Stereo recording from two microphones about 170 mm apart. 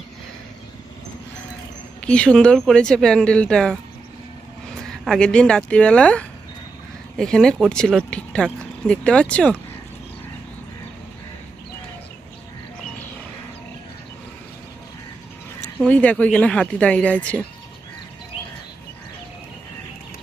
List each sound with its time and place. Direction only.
2.0 s speech: 5° left (ahead or behind)
5.0 s speech: 5° left (ahead or behind)
15.8 s speech: 10° left (ahead or behind)